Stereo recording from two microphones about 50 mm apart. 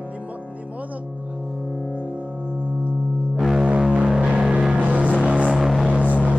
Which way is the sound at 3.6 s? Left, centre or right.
Right.